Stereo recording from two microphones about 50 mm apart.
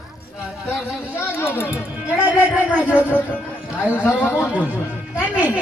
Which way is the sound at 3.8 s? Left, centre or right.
Left.